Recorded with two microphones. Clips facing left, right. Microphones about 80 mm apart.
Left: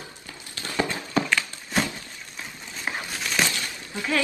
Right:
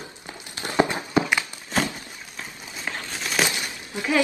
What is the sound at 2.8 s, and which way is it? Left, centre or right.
Crumpling, centre.